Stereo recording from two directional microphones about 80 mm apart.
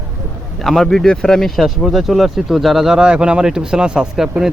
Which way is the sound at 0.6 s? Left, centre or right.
Centre.